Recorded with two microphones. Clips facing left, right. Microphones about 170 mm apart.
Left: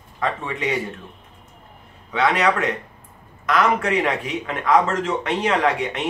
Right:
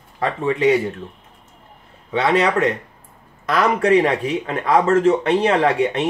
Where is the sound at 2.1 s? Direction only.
30° right (ahead or behind).